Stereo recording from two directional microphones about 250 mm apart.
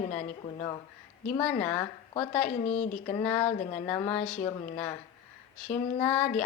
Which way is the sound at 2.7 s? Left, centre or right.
Left.